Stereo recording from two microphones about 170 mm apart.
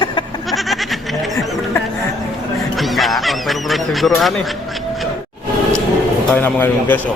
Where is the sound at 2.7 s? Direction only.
Centre (ahead or behind).